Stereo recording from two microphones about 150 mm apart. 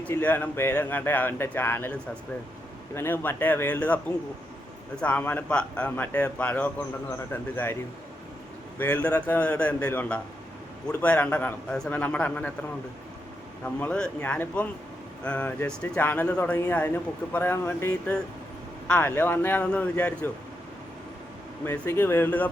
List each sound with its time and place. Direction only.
0.0 s speech: 10° left (ahead or behind)
8.8 s speech: 10° left (ahead or behind)
13.7 s speech: 10° left (ahead or behind)
21.6 s speech: 15° left (ahead or behind)